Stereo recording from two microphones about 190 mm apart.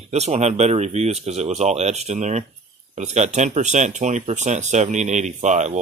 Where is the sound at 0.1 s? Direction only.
35° right (ahead or behind).